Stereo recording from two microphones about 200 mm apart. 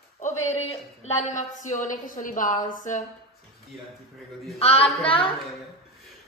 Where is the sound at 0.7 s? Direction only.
35° left (ahead or behind).